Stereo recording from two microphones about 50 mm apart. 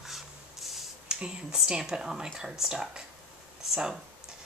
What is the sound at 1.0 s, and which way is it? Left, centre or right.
Speech, centre.